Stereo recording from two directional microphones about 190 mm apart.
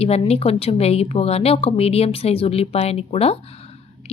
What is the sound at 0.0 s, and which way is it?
Speech, 35° left (ahead or behind).